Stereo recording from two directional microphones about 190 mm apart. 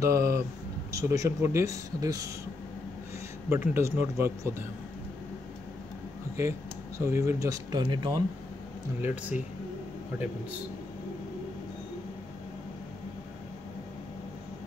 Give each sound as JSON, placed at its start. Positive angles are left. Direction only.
{"t": 0.0, "sound": "speech", "side_deg": -15}
{"t": 3.4, "sound": "speech", "side_deg": -15}
{"t": 7.0, "sound": "speech", "side_deg": -15}
{"t": 9.0, "sound": "speech", "side_deg": -10}